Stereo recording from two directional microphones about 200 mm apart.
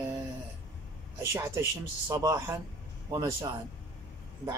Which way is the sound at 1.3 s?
15° right (ahead or behind).